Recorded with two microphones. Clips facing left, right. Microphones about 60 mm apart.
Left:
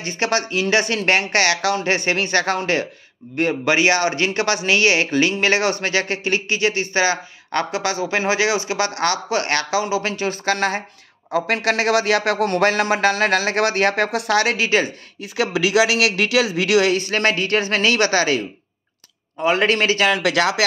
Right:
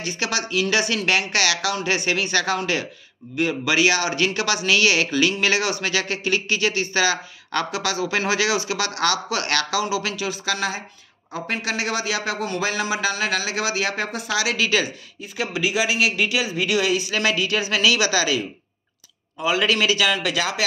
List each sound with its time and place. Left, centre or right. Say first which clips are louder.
0.0 s speech: left 5 dB; left
11.3 s speech: left 7 dB; left
14.6 s speech: left 3 dB; left
15.3 s speech: left 6 dB; left
16.9 s speech: left 3 dB; left
19.4 s speech: left 3 dB; left